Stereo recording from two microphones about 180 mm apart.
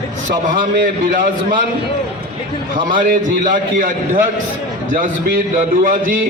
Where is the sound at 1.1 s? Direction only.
45° right (ahead or behind).